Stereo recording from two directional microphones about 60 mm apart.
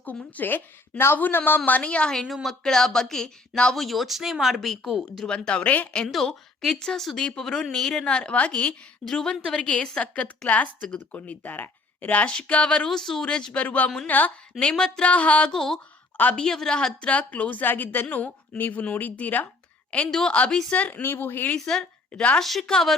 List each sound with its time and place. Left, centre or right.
0.0 s a woman's voice: left
2.1 s speech: centre
5.5 s a woman's voice: centre
8.0 s a woman's voice: centre
9.0 s speech: centre
9.6 s a woman's voice: left
14.6 s speech: centre
15.5 s a woman's voice: centre; by 19.5 s left
20.1 s speech: centre
20.3 s a woman's voice: left
21.0 s speech: left
21.6 s speech: centre
22.1 s a woman's voice: left
22.4 s speech: centre